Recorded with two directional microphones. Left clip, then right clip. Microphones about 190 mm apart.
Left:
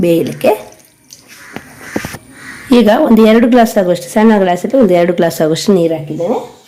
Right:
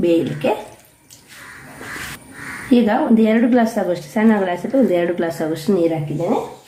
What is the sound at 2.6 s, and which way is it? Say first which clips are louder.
A woman's voice: left 8 dB; 50° left (ahead or behind).